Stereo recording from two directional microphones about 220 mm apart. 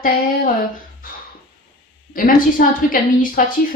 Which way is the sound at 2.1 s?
40° left (ahead or behind).